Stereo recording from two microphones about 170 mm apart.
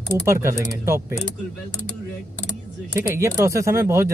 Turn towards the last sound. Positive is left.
turn(degrees=-15)  # may be behind; listen again after turning